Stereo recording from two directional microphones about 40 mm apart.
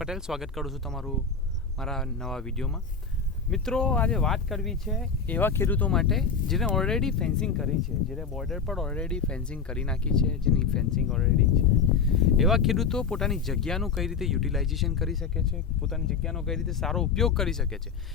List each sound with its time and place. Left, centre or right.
0.0 s speech: centre
0.9 s speech: centre
5.3 s speech: left
5.9 s speech: centre
8.6 s speech: centre
8.9 s speech: left
11.2 s speech: centre
12.9 s speech: centre
13.2 s speech: centre